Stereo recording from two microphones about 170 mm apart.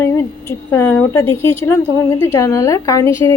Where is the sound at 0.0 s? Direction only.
15° left (ahead or behind).